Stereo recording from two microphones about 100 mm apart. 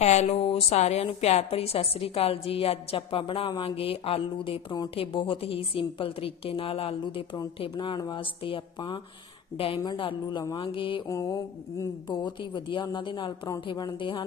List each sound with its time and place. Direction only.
0.0 s a woman's voice: 90° left; by 9.8 s 65° left (ahead or behind)
9.8 s a woman's voice: 50° left (ahead or behind)
11.0 s a woman's voice: 35° left (ahead or behind)